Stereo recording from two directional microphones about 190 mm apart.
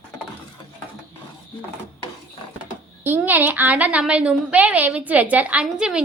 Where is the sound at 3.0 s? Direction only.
10° right (ahead or behind).